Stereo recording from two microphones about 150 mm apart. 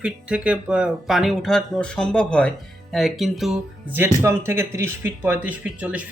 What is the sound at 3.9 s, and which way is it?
Speech, 15° right (ahead or behind).